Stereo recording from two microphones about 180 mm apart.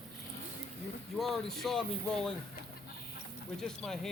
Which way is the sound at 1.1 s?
Centre (ahead or behind).